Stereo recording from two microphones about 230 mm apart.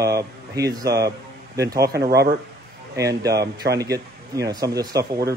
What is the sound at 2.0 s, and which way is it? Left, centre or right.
Speech, right.